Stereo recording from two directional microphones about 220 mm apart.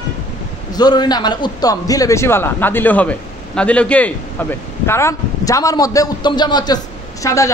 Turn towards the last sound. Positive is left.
turn(degrees=15)  # may be behind; listen again after turning